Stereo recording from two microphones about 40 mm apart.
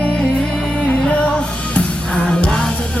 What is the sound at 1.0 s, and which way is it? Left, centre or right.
Music, left.